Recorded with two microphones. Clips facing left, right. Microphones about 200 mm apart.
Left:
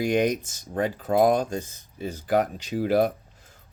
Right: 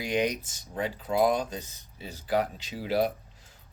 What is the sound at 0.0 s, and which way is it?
Speech, 50° left (ahead or behind).